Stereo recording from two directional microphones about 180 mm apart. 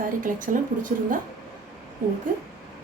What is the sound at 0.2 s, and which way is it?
Speech, 45° right (ahead or behind).